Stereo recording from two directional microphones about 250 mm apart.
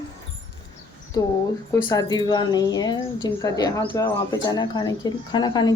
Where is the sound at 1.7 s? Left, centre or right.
Centre.